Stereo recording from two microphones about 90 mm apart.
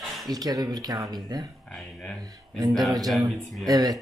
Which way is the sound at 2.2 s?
50° right (ahead or behind).